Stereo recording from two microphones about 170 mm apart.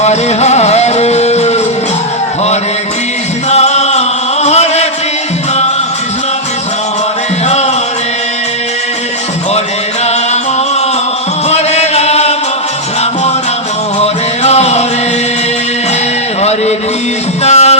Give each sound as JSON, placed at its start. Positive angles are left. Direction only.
{"t": 0.0, "sound": "music", "side_deg": 40}
{"t": 3.5, "sound": "music", "side_deg": 40}
{"t": 4.4, "sound": "chant", "side_deg": 40}
{"t": 11.4, "sound": "chant", "side_deg": 40}
{"t": 14.0, "sound": "music", "side_deg": 40}
{"t": 16.4, "sound": "a sound", "side_deg": 40}
{"t": 17.4, "sound": "music", "side_deg": 40}